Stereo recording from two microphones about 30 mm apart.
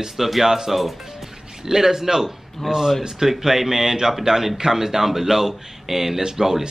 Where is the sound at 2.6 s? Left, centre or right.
Centre.